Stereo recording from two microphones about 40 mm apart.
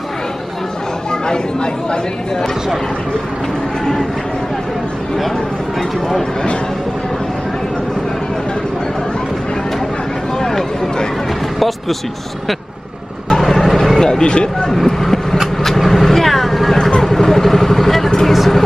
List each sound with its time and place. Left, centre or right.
1.2 s speech: left
5.8 s speech: centre
10.4 s a sound: centre
13.3 s vehicle: centre
14.7 s speech: centre